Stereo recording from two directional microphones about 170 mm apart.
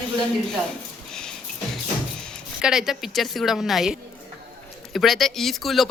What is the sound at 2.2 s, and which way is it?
A woman's voice, centre (ahead or behind).